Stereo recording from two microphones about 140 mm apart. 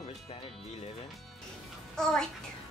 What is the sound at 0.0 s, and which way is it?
Music, 45° left (ahead or behind).